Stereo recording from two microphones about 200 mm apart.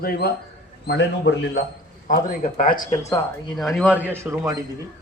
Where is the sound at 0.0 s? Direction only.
50° left (ahead or behind).